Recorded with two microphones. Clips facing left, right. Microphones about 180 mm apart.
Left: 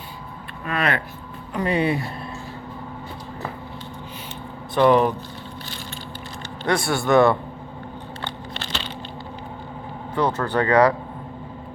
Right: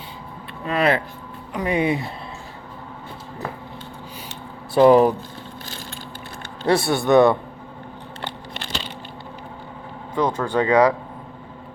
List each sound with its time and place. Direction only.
0.6 s speech: 25° right (ahead or behind)
1.5 s speech: 10° right (ahead or behind)
4.7 s speech: 35° right (ahead or behind)
6.7 s speech: 25° right (ahead or behind)
8.2 s a sound: 10° right (ahead or behind)
10.2 s speech: 10° right (ahead or behind)